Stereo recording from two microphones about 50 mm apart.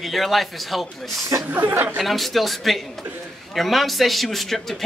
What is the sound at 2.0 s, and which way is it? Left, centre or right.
A man's voice, centre.